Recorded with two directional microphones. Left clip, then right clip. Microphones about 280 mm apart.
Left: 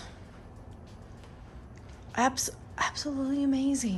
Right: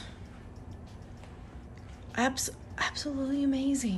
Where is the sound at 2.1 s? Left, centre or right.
Centre.